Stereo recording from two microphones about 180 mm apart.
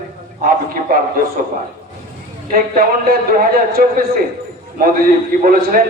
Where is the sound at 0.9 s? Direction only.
55° right (ahead or behind).